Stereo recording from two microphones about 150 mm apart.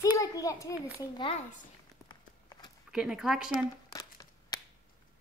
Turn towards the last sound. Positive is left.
turn(degrees=25)  # may be behind; listen again after turning